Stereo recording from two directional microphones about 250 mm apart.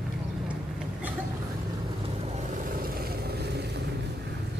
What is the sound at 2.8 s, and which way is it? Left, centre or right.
Vehicle, right.